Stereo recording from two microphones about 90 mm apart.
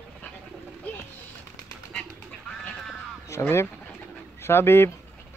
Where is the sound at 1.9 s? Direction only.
5° left (ahead or behind).